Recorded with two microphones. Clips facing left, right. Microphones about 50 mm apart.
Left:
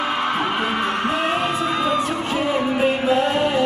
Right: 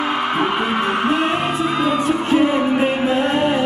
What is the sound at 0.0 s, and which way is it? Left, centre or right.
Music, centre.